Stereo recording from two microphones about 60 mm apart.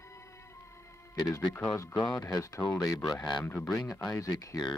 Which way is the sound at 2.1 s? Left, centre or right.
Left.